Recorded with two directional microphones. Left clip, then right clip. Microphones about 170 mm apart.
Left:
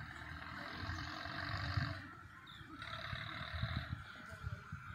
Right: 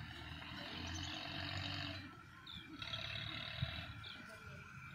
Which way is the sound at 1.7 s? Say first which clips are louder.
Left 2 dB; 20° right (ahead or behind).